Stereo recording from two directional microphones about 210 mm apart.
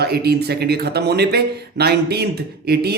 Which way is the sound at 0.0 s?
50° right (ahead or behind).